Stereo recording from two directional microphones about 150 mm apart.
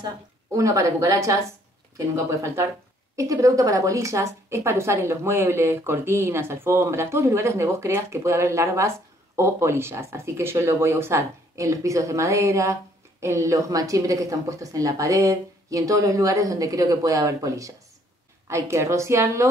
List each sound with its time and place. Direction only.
0.0 s a woman's voice: 20° right (ahead or behind)